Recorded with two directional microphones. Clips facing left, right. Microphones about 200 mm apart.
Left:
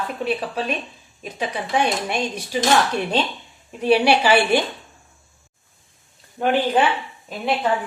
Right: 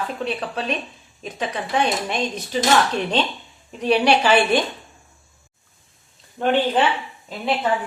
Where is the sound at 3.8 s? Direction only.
10° left (ahead or behind).